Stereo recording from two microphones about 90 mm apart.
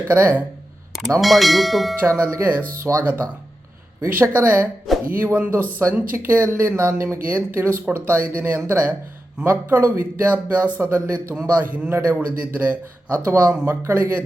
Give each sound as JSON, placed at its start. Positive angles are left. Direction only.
{"t": 0.1, "sound": "a man's voice", "side_deg": -25}
{"t": 1.2, "sound": "speech", "side_deg": 0}
{"t": 2.0, "sound": "a man's voice", "side_deg": -25}
{"t": 11.3, "sound": "a man's voice", "side_deg": -20}